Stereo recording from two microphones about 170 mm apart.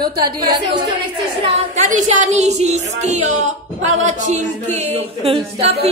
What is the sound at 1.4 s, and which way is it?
A woman's voice, 45° right (ahead or behind).